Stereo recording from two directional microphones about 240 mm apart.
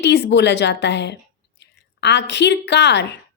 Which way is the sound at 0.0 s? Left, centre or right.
Left.